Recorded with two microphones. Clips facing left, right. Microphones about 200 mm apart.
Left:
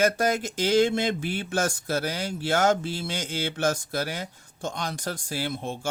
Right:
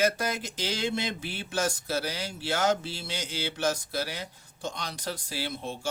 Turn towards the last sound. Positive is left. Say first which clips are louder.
# left 4 dB
turn(degrees=50)  # may be behind; listen again after turning